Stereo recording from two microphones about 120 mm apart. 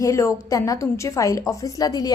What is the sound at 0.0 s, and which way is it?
A woman's voice, 25° left (ahead or behind).